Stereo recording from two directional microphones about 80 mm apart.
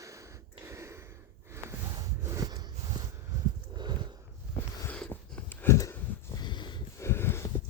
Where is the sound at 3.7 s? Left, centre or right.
Right.